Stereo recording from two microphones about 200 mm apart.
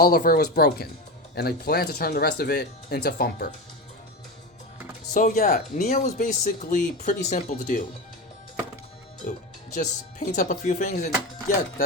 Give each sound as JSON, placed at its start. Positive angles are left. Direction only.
{"t": 0.0, "sound": "speech", "side_deg": 45}
{"t": 5.1, "sound": "speech", "side_deg": 45}
{"t": 9.2, "sound": "speech", "side_deg": 40}